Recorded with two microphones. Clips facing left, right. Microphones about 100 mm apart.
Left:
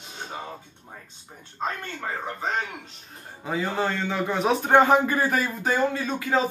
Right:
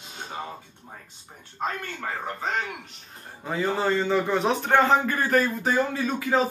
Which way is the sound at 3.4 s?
Centre (ahead or behind).